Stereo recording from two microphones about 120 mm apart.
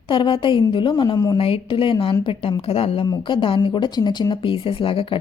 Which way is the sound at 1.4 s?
50° left (ahead or behind).